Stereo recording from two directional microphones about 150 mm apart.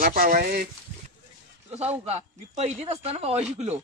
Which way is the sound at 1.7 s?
45° right (ahead or behind).